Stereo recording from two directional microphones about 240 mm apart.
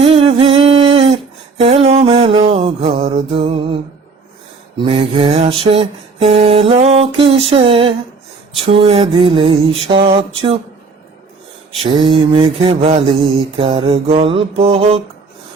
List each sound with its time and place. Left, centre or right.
0.0 s a sound: right
1.5 s music: right
4.9 s mantra: right
11.8 s mantra: centre